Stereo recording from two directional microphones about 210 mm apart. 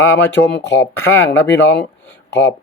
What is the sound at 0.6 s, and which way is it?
Speech, 60° left (ahead or behind).